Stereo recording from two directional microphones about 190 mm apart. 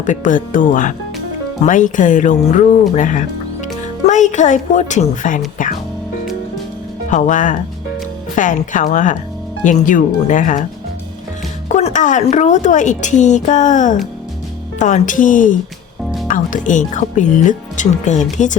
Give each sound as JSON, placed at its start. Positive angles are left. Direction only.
{"t": 0.0, "sound": "a woman's voice", "side_deg": 45}
{"t": 2.9, "sound": "music", "side_deg": 40}
{"t": 4.0, "sound": "a woman's voice", "side_deg": 40}
{"t": 5.6, "sound": "music", "side_deg": 45}
{"t": 7.1, "sound": "a woman's voice", "side_deg": 40}
{"t": 11.7, "sound": "a woman's voice", "side_deg": 35}